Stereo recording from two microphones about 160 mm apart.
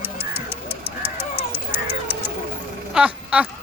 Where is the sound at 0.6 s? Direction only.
40° right (ahead or behind).